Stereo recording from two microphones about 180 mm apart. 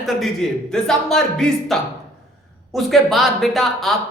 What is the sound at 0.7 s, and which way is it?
Speech, 5° left (ahead or behind).